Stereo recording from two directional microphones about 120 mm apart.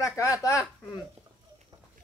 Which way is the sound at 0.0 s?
25° left (ahead or behind).